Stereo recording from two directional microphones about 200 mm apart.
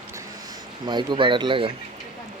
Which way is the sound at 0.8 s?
25° right (ahead or behind).